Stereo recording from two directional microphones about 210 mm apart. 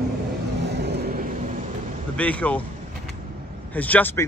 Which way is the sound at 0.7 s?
50° right (ahead or behind).